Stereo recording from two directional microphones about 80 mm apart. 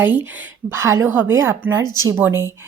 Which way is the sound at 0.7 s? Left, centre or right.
Right.